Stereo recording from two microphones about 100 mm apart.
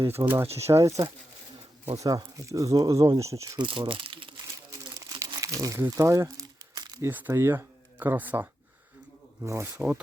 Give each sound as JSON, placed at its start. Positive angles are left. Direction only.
{"t": 0.2, "sound": "speech", "side_deg": -35}
{"t": 3.6, "sound": "speech", "side_deg": -55}
{"t": 4.7, "sound": "crumpling", "side_deg": -35}
{"t": 7.1, "sound": "speech", "side_deg": -20}
{"t": 9.4, "sound": "speech", "side_deg": -30}
{"t": 9.7, "sound": "speech", "side_deg": -10}